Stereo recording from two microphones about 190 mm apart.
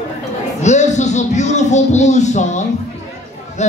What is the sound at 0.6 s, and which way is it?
Speech, 40° left (ahead or behind).